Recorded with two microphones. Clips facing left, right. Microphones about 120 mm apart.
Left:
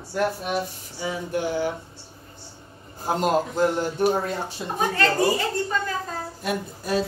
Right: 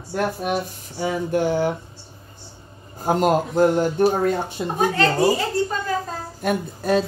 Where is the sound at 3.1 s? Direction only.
50° right (ahead or behind).